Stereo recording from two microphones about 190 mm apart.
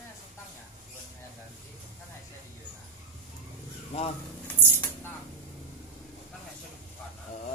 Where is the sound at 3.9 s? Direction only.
35° left (ahead or behind).